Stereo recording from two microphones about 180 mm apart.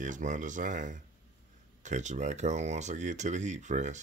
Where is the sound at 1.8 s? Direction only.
40° right (ahead or behind).